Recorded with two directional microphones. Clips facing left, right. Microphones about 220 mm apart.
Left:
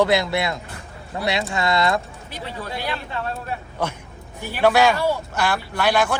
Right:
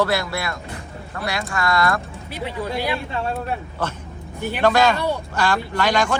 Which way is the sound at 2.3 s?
10° right (ahead or behind).